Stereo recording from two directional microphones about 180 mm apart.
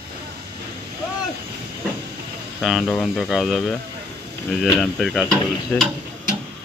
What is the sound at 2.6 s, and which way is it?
Speech, centre (ahead or behind).